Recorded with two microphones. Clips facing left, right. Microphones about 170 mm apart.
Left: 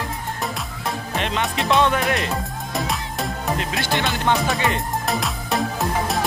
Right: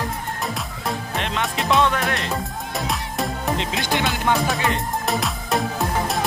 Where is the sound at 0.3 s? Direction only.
Centre (ahead or behind).